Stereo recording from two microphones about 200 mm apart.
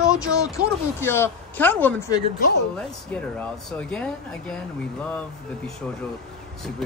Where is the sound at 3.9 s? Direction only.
5° left (ahead or behind).